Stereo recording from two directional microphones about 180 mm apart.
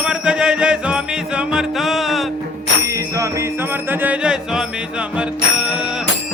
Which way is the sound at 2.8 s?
15° right (ahead or behind).